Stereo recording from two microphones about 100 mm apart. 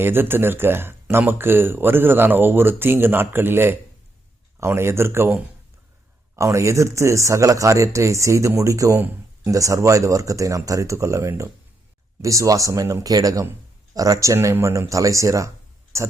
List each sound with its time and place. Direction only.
0.0 s speech: 20° right (ahead or behind)